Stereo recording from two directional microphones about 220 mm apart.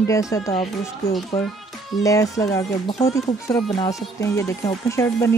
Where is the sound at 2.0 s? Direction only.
15° left (ahead or behind).